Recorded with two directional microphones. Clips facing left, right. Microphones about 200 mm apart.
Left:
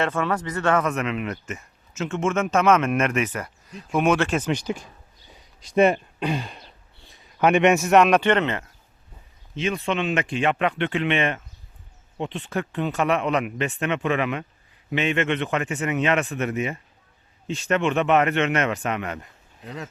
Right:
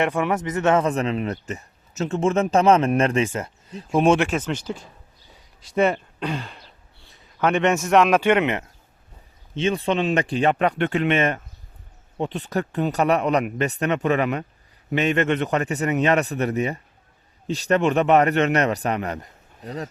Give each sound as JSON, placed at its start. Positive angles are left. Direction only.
{"t": 0.0, "sound": "a man's voice", "side_deg": -15}
{"t": 4.4, "sound": "speech", "side_deg": 15}
{"t": 9.6, "sound": "a man's voice", "side_deg": -30}